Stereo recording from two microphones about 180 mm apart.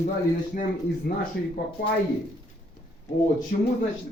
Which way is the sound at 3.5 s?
60° left (ahead or behind).